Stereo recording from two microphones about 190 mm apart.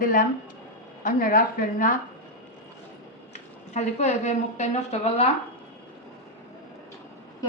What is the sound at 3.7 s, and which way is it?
A woman's voice, 35° left (ahead or behind).